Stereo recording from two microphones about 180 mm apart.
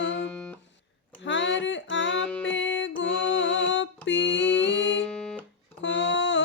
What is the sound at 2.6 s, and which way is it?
Music, 90° left.